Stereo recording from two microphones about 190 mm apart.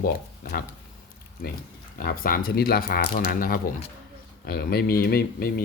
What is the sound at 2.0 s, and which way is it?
Speech, 50° left (ahead or behind).